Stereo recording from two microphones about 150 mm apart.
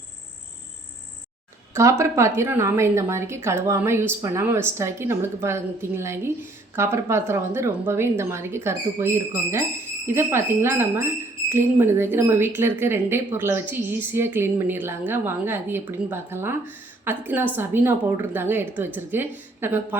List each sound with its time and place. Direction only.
1.7 s speech: 20° right (ahead or behind)